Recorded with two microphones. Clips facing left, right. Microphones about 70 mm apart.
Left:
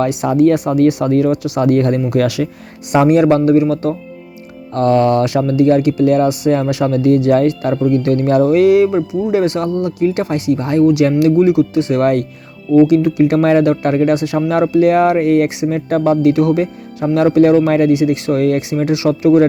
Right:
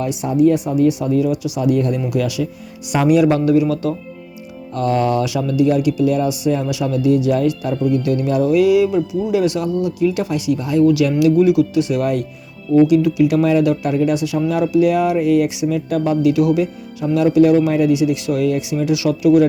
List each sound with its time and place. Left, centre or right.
0.0 s speech: left
2.9 s a man's voice: left
4.7 s a man's voice: left
9.6 s speech: left
11.3 s a man's voice: left